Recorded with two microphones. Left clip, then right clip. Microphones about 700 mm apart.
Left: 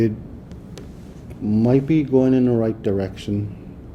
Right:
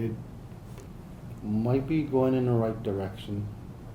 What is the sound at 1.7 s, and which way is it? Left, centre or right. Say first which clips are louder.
Speech: left 10 dB; left.